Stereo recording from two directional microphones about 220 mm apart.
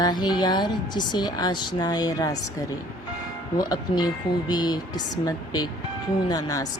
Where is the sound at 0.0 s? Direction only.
20° left (ahead or behind).